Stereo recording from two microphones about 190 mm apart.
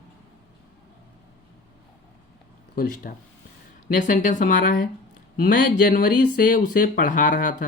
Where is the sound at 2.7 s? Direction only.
50° left (ahead or behind).